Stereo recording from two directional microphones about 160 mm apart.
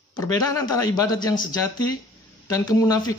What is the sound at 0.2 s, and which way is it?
Speech, 20° left (ahead or behind).